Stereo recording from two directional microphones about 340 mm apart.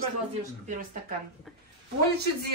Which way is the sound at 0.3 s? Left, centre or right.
Right.